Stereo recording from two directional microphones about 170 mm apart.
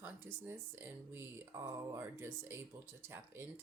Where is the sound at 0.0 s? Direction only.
10° right (ahead or behind).